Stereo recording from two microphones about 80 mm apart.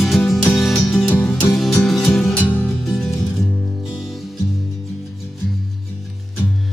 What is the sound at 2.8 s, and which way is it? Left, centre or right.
Music, centre.